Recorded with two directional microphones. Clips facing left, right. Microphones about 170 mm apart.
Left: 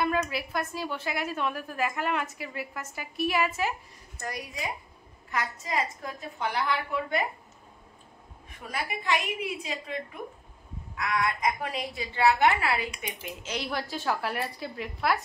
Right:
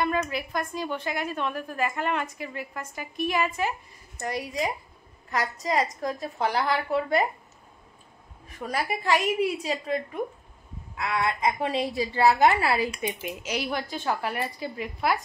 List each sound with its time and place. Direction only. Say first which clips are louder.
0.0 s a woman's voice: right 1 dB; 5° left (ahead or behind)
4.2 s a woman's voice: right 6 dB; 25° right (ahead or behind)
5.3 s a woman's voice: right 4 dB; 35° right (ahead or behind)
8.5 s a woman's voice: right 5 dB; 40° right (ahead or behind)
11.0 s a woman's voice: right 2 dB; 25° right (ahead or behind)
13.4 s a woman's voice: right 2 dB; 10° right (ahead or behind)